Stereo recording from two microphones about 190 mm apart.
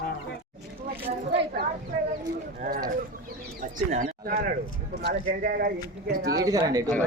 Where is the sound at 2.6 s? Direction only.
50° right (ahead or behind).